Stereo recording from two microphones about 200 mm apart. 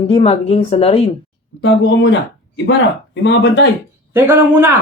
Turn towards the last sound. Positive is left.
turn(degrees=-10)  # may be behind; listen again after turning